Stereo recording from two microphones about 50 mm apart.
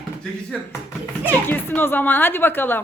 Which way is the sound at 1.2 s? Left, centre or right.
Left.